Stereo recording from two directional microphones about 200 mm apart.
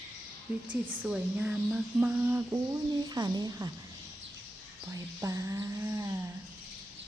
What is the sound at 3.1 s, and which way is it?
Speech, 20° right (ahead or behind).